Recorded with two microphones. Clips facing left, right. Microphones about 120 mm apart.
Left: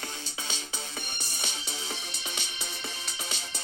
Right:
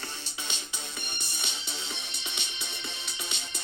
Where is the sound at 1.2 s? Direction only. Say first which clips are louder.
Left 2 dB; 40° left (ahead or behind).